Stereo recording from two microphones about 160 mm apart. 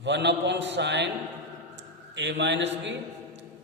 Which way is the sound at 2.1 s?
90° right.